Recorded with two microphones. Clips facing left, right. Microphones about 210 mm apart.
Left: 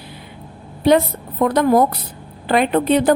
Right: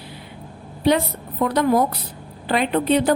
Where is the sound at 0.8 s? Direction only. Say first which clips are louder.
Left 4 dB; 50° left (ahead or behind).